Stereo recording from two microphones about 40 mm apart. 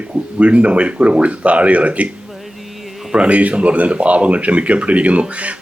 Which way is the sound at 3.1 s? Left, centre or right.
Right.